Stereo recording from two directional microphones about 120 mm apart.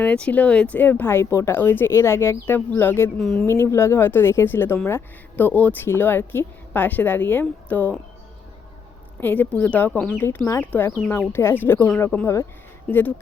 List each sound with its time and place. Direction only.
0.0 s speech: 10° left (ahead or behind)
3.2 s speech: 5° left (ahead or behind)
3.4 s a woman's voice: 20° left (ahead or behind)
9.2 s a woman's voice: 15° left (ahead or behind)